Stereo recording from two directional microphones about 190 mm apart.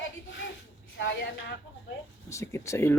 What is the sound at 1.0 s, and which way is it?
Speech, 75° left (ahead or behind).